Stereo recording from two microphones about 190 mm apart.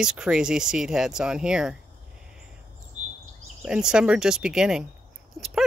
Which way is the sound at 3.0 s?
35° right (ahead or behind).